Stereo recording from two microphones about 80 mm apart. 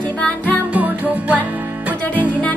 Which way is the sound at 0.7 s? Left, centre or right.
Centre.